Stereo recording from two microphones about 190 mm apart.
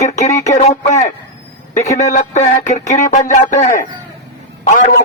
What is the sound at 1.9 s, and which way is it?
Speech, 40° left (ahead or behind).